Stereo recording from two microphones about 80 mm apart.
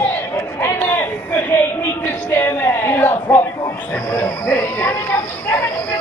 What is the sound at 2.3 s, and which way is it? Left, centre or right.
Speech, left.